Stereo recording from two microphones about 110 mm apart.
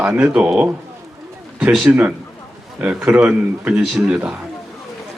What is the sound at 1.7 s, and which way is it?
A man's voice, 5° right (ahead or behind).